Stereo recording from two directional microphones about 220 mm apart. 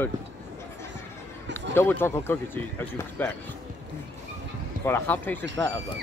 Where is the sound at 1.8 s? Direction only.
10° left (ahead or behind).